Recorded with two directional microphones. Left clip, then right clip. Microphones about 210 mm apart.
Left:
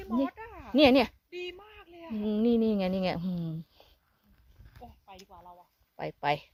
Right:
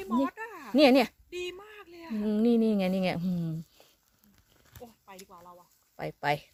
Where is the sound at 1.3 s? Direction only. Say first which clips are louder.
Right 2 dB; 45° right (ahead or behind).